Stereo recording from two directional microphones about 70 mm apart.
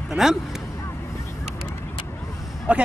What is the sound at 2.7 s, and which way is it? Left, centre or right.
Speech, centre.